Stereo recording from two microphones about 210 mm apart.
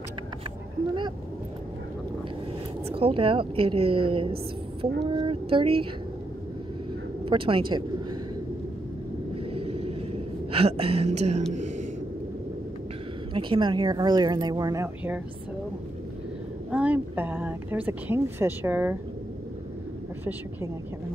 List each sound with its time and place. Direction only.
2.9 s speech: 25° right (ahead or behind)
7.2 s speech: 25° right (ahead or behind)
9.5 s a sound: 30° right (ahead or behind)
13.3 s speech: 25° right (ahead or behind)
16.7 s speech: 5° right (ahead or behind)